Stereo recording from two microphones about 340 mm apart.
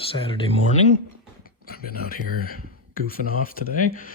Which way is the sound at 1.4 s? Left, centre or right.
Left.